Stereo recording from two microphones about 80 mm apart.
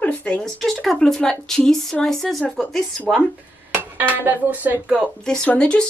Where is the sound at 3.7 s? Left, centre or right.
Right.